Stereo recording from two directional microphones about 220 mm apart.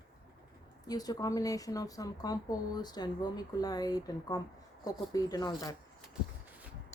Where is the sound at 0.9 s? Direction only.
15° left (ahead or behind).